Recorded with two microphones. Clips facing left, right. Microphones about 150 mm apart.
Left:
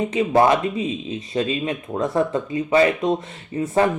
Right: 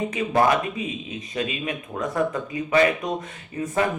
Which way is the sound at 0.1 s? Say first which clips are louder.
Left 4 dB; 25° left (ahead or behind).